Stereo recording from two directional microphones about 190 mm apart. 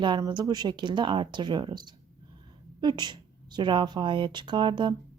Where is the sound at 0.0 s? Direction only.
25° right (ahead or behind).